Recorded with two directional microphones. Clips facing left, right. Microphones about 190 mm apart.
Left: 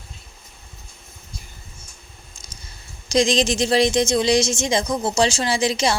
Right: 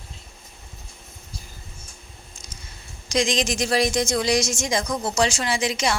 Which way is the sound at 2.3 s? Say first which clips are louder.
Right 1 dB; 35° left (ahead or behind).